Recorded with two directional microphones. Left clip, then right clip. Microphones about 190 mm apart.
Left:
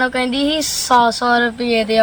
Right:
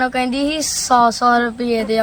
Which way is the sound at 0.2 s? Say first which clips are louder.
Left 1 dB; 25° right (ahead or behind).